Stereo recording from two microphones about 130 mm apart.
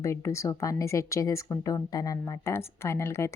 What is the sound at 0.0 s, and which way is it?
A woman's voice, 20° left (ahead or behind).